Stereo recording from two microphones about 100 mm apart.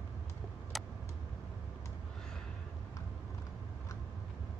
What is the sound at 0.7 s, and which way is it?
Vehicle, centre (ahead or behind).